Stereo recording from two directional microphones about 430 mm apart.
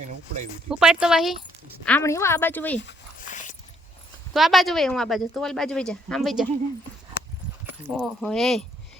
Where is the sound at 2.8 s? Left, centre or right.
Centre.